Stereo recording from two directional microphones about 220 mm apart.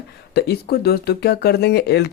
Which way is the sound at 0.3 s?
45° left (ahead or behind).